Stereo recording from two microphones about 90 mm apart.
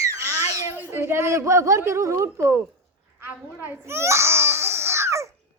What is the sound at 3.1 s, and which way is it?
Babbling, 25° right (ahead or behind).